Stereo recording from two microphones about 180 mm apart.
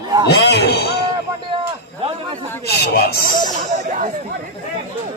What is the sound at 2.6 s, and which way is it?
Speech, 65° left (ahead or behind).